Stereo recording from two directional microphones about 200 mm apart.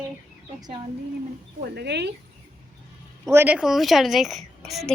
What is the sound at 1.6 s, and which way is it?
Speech, 55° right (ahead or behind).